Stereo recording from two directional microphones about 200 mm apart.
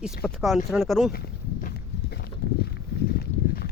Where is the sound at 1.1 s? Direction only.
50° left (ahead or behind).